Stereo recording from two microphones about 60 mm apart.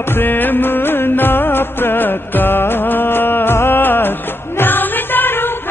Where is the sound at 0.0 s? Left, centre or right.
Left.